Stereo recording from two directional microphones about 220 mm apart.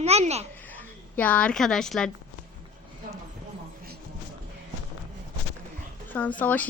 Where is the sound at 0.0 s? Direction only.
30° right (ahead or behind).